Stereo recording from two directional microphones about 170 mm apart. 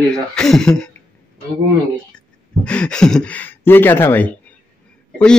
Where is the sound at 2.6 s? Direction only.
5° left (ahead or behind).